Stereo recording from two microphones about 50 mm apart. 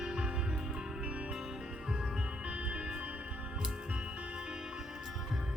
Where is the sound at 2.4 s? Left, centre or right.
Right.